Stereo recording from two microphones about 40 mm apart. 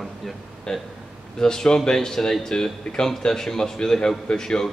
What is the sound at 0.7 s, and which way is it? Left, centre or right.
Speech, centre.